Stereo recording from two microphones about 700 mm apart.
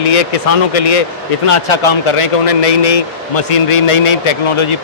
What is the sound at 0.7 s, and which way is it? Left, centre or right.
A man's voice, left.